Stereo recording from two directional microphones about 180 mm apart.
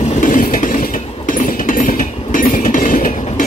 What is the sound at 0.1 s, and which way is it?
Train, 45° left (ahead or behind).